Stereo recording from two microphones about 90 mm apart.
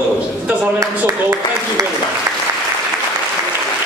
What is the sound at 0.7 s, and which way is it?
Speech, 35° right (ahead or behind).